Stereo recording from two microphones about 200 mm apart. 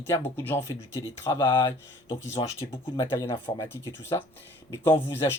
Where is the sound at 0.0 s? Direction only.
10° left (ahead or behind).